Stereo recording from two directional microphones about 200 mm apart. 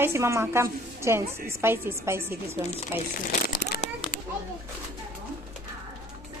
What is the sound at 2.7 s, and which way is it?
Speech, 40° left (ahead or behind).